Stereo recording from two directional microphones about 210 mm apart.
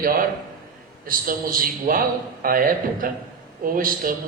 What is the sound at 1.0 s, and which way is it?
A man's voice, 40° right (ahead or behind).